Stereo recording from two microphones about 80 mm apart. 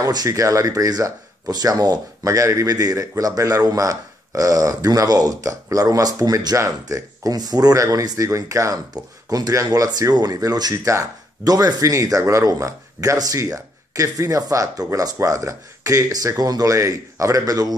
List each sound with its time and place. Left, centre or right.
0.0 s speech: right